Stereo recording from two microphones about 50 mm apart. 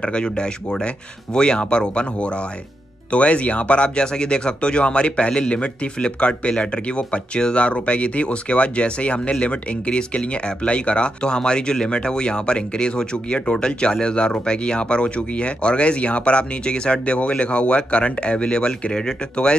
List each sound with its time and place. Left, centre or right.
0.0 s speech: centre